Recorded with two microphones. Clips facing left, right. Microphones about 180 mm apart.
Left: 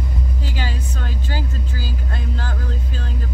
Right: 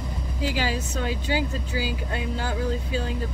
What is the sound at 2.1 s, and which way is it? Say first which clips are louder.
Speech: right 2 dB; 10° right (ahead or behind).